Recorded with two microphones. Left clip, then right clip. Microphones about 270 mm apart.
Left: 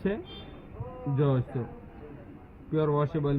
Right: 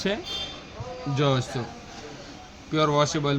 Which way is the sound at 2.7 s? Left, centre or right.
Centre.